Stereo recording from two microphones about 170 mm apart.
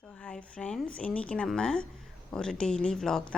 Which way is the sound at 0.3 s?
5° left (ahead or behind).